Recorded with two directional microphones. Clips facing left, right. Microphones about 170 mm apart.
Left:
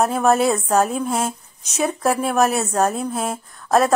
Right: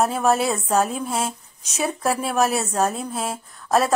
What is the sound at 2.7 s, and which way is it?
Speech, 40° left (ahead or behind).